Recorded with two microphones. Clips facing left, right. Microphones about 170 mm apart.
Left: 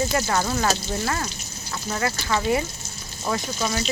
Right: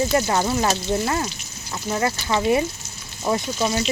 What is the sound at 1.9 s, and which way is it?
Speech, 25° right (ahead or behind).